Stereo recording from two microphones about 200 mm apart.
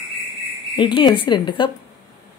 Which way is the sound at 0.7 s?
25° left (ahead or behind).